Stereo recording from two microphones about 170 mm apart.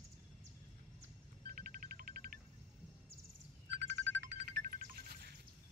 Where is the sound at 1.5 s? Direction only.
60° right (ahead or behind).